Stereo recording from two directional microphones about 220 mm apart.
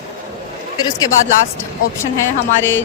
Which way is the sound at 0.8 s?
15° left (ahead or behind).